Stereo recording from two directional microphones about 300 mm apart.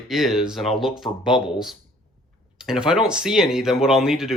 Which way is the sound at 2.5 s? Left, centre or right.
Centre.